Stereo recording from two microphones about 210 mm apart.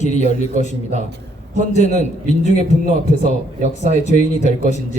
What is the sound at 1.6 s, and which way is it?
A man's voice, 35° left (ahead or behind).